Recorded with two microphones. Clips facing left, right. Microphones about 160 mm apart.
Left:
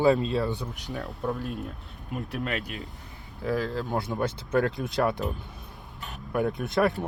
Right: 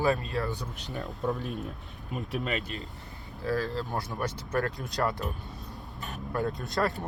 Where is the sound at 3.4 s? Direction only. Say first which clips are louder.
Left 2 dB; 15° left (ahead or behind).